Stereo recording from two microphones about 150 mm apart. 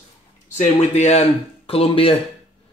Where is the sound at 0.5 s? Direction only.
50° left (ahead or behind).